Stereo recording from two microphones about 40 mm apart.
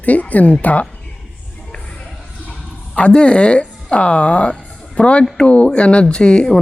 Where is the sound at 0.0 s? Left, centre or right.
Left.